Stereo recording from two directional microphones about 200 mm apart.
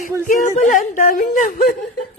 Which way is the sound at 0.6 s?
40° left (ahead or behind).